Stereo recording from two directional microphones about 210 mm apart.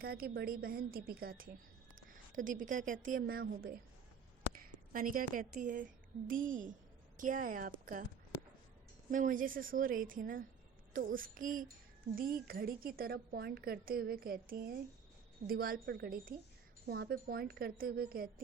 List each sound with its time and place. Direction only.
0.0 s a woman's voice: 45° right (ahead or behind)
4.9 s a woman's voice: 40° right (ahead or behind)
9.0 s a woman's voice: 40° right (ahead or behind)